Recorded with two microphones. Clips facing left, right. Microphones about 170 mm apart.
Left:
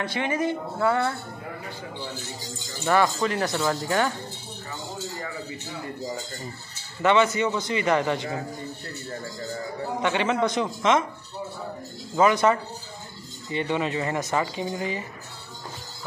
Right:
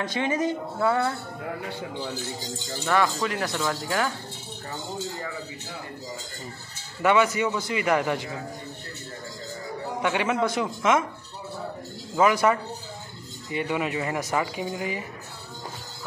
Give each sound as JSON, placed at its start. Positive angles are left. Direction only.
{"t": 0.0, "sound": "speech", "side_deg": -15}
{"t": 2.8, "sound": "speech", "side_deg": 5}
{"t": 7.0, "sound": "speech", "side_deg": -10}
{"t": 10.0, "sound": "speech", "side_deg": -10}
{"t": 12.2, "sound": "speech", "side_deg": -10}